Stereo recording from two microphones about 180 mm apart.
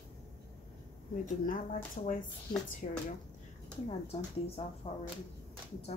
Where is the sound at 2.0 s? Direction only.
50° left (ahead or behind).